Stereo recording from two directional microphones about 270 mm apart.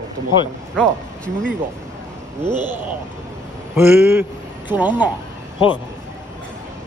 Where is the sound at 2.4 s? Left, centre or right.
Centre.